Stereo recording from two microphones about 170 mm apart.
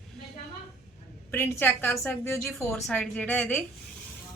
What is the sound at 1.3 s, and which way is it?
A woman's voice, 10° left (ahead or behind).